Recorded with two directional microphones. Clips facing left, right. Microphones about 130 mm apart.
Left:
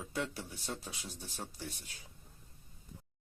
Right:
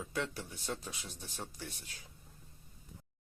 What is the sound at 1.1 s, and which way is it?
Speech, 10° left (ahead or behind).